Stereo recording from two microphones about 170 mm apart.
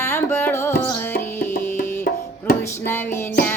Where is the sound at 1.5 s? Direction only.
60° left (ahead or behind).